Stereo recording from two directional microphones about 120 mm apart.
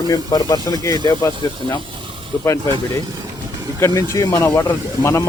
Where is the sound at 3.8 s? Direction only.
25° left (ahead or behind).